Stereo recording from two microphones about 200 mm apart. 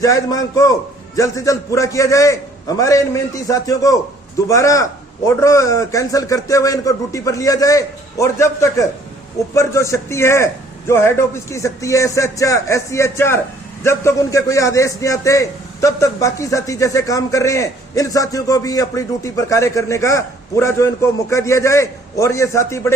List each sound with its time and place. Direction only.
0.0 s a man's voice: 15° left (ahead or behind)